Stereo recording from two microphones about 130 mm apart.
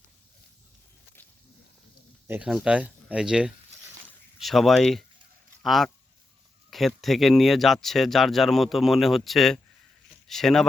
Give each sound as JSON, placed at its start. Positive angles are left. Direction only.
{"t": 2.2, "sound": "speech", "side_deg": -15}
{"t": 2.5, "sound": "speech", "side_deg": -5}